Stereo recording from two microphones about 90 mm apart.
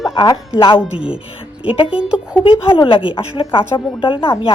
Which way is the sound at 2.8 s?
80° left.